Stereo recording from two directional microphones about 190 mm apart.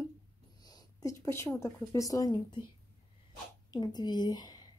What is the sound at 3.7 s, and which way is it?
Speech, 20° left (ahead or behind).